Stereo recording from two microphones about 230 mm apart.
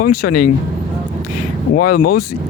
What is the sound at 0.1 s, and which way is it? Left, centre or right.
Speech, left.